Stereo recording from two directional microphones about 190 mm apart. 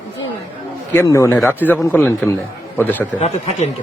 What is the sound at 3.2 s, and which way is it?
Speech, 35° left (ahead or behind).